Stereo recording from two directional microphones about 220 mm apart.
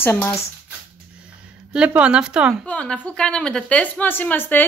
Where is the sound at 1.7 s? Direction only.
5° right (ahead or behind).